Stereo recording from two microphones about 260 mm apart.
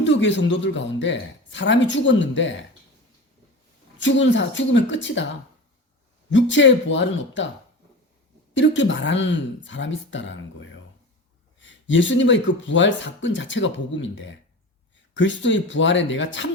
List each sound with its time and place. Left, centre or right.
0.0 s speech: left
3.9 s speech: left
6.3 s speech: left
8.5 s speech: left